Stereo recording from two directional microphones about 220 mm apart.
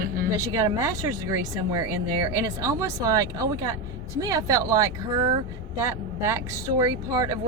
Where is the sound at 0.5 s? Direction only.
15° right (ahead or behind).